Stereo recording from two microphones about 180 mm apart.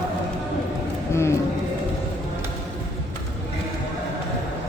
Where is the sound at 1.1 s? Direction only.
15° left (ahead or behind).